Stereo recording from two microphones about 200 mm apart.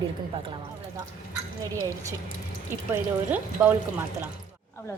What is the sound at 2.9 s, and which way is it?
Speech, 10° right (ahead or behind).